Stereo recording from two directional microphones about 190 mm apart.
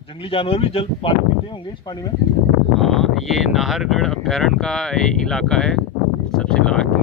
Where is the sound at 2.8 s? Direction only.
Centre (ahead or behind).